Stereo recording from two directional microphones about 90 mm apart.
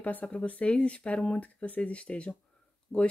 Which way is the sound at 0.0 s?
15° left (ahead or behind).